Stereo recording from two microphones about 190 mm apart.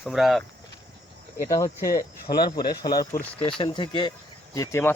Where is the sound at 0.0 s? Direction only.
Centre (ahead or behind).